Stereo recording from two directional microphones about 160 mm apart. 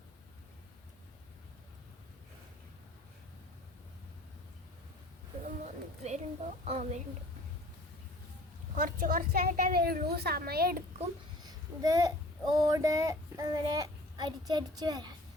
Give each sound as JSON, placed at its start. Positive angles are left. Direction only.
{"t": 5.6, "sound": "a sound", "side_deg": -45}
{"t": 6.7, "sound": "a woman's voice", "side_deg": -40}
{"t": 8.7, "sound": "a woman's voice", "side_deg": -55}
{"t": 11.4, "sound": "a child's voice", "side_deg": -20}